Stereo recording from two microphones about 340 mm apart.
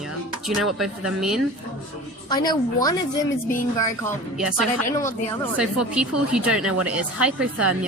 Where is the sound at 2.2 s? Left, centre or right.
Centre.